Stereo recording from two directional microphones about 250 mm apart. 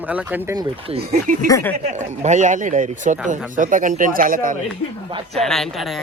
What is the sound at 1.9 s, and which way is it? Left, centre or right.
A man's voice, right.